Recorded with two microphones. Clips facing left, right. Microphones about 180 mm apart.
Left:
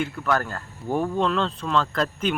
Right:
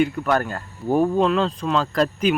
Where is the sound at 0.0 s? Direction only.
20° right (ahead or behind).